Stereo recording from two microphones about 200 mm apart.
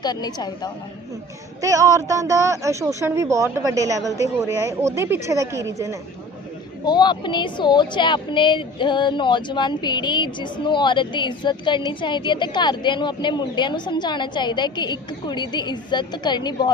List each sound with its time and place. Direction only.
0.0 s speech: 20° left (ahead or behind)
1.6 s speech: 15° right (ahead or behind)
6.8 s speech: 20° left (ahead or behind)